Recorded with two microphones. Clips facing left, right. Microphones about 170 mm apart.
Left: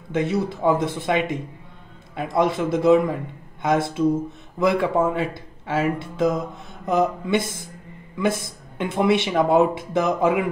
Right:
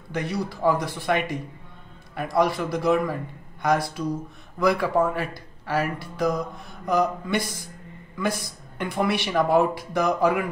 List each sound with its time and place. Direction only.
0.1 s speech: 20° left (ahead or behind)